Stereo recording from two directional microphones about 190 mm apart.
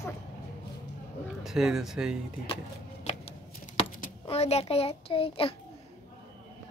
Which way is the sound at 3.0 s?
35° left (ahead or behind).